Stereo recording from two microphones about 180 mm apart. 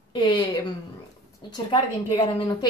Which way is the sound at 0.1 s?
25° left (ahead or behind).